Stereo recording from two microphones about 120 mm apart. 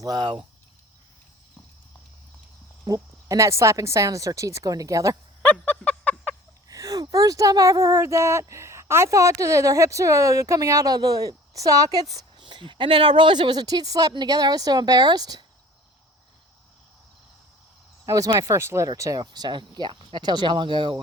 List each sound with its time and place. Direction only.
0.0 s speech: 35° right (ahead or behind)
2.8 s speech: 30° right (ahead or behind)
5.4 s a sound: 15° left (ahead or behind)
6.7 s speech: 30° right (ahead or behind)
18.0 s speech: 25° right (ahead or behind)